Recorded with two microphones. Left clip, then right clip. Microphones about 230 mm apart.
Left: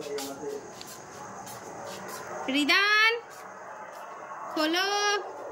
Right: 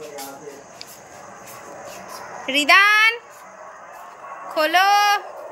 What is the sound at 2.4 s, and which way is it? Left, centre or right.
Speech, centre.